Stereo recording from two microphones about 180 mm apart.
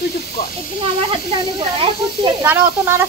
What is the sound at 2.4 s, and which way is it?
Speech, 15° right (ahead or behind).